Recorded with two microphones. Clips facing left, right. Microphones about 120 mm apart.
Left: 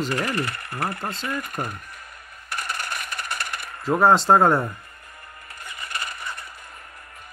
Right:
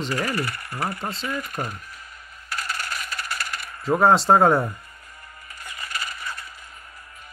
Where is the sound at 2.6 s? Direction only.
55° left (ahead or behind).